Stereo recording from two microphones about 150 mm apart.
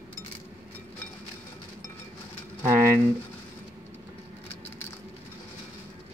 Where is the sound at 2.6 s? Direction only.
15° right (ahead or behind).